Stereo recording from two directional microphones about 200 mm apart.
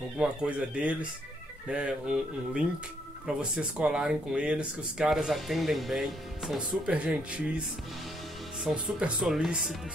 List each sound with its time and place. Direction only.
0.2 s speech: 5° right (ahead or behind)
8.6 s speech: 5° right (ahead or behind)